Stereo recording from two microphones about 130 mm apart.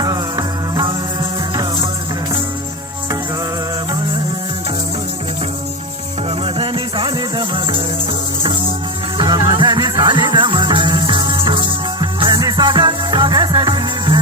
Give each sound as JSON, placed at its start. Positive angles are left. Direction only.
{"t": 0.0, "sound": "music", "side_deg": -30}
{"t": 6.4, "sound": "music", "side_deg": -45}
{"t": 9.1, "sound": "music", "side_deg": -35}